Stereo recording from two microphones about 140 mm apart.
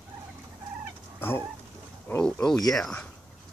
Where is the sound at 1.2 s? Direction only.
15° left (ahead or behind).